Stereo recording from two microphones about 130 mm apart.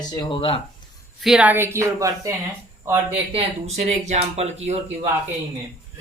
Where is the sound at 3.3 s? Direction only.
50° right (ahead or behind).